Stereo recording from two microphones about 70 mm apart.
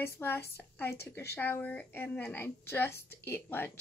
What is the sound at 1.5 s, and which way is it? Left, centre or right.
Speech, left.